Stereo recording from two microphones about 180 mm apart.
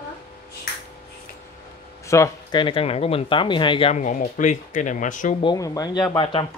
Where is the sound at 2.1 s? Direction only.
15° left (ahead or behind).